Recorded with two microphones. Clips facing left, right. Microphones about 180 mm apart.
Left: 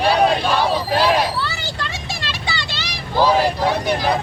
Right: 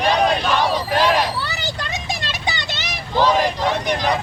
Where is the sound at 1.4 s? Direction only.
20° right (ahead or behind).